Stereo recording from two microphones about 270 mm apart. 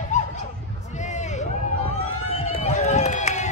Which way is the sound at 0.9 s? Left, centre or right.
Left.